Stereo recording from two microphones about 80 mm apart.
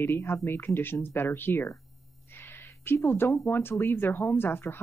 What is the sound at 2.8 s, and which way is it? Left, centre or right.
Speech, left.